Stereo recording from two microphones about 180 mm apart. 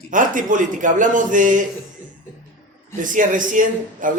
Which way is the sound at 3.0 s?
45° right (ahead or behind).